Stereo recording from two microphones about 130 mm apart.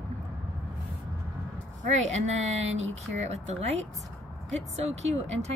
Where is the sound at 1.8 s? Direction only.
60° right (ahead or behind).